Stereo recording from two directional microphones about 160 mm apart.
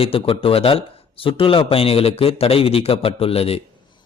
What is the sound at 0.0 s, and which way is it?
A man's voice, 35° left (ahead or behind).